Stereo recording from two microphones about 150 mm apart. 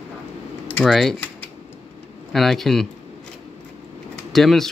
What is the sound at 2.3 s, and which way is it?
Speech, centre (ahead or behind).